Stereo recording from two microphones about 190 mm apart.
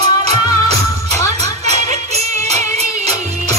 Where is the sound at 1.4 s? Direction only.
35° right (ahead or behind).